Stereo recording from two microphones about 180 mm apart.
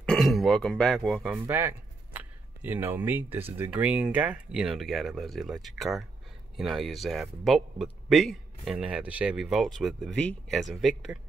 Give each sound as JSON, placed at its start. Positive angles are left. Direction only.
{"t": 0.0, "sound": "speech", "side_deg": 5}